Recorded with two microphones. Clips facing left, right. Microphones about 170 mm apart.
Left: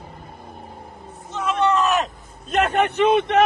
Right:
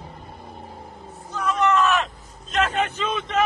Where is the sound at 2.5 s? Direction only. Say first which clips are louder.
Left 5 dB; 65° left (ahead or behind).